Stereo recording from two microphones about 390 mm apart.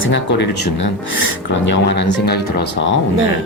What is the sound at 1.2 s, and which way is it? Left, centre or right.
Speech, left.